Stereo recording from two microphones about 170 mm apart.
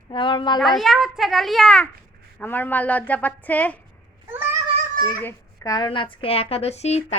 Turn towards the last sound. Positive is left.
turn(degrees=40)  # may be behind; listen again after turning